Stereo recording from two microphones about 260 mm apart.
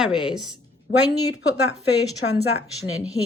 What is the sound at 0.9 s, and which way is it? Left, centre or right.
Speech, left.